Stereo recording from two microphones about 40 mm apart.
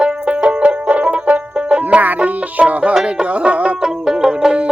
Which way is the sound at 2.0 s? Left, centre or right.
Right.